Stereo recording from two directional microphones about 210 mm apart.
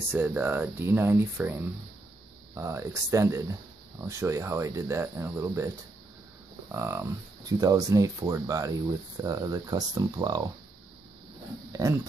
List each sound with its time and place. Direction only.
0.1 s speech: 10° right (ahead or behind)
6.7 s speech: 10° right (ahead or behind)
11.7 s speech: 15° right (ahead or behind)